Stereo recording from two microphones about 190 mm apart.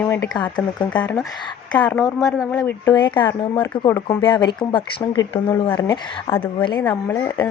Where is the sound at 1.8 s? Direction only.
5° left (ahead or behind).